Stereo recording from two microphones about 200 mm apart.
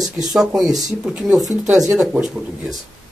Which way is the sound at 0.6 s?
20° right (ahead or behind).